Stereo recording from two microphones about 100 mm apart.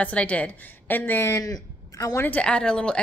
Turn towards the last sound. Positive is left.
turn(degrees=10)  # may be behind; listen again after turning